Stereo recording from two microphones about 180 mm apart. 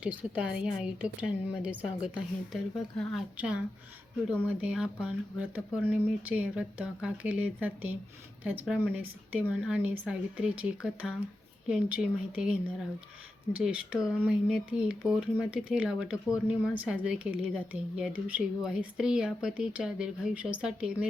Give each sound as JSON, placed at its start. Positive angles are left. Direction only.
{"t": 0.0, "sound": "speech", "side_deg": -10}